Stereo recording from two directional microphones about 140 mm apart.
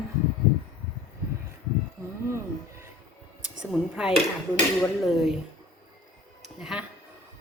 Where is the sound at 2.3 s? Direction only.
20° right (ahead or behind).